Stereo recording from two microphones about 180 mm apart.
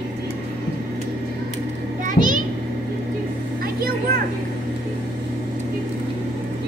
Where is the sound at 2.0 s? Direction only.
45° right (ahead or behind).